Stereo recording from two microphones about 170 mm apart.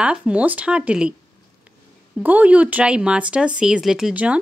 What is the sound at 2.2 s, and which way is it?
Speech, 10° right (ahead or behind).